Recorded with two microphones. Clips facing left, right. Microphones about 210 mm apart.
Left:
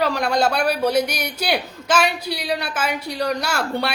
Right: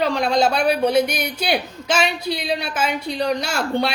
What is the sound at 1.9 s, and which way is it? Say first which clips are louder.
Speech: left 1 dB; 55° left (ahead or behind).